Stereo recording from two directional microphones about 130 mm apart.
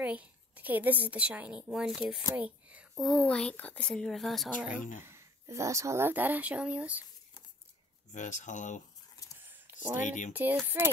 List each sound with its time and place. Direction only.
0.0 s a woman's voice: 10° right (ahead or behind)
2.3 s whispering: 10° right (ahead or behind)
2.9 s a woman's voice: centre (ahead or behind)
5.0 s speech: 20° right (ahead or behind)
8.1 s speech: 70° left (ahead or behind)
9.4 s a sound: 15° right (ahead or behind)
10.0 s speech: 75° left (ahead or behind)
10.3 s speech: 15° right (ahead or behind)